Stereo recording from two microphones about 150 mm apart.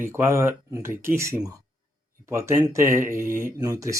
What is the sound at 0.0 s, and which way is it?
Speech, 15° right (ahead or behind).